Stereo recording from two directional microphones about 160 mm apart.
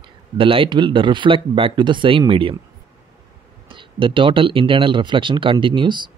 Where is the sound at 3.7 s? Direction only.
30° right (ahead or behind).